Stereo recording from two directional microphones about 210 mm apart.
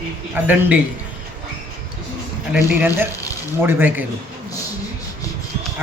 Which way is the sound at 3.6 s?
10° right (ahead or behind).